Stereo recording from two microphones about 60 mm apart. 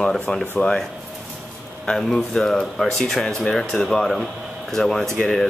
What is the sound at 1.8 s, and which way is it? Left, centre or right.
Speech, centre.